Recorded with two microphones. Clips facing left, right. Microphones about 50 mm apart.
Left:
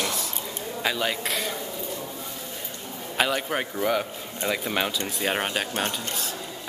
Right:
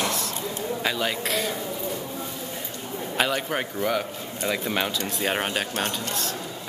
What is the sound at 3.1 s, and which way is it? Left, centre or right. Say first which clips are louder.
A man's voice: even; centre.